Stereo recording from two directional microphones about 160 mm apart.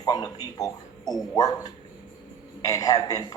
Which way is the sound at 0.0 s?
25° left (ahead or behind).